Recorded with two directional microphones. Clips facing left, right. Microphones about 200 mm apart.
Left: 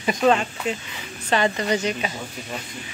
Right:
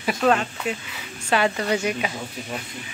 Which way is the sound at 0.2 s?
5° left (ahead or behind).